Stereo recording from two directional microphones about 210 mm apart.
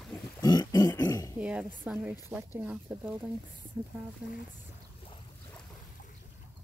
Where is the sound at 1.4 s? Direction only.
5° right (ahead or behind).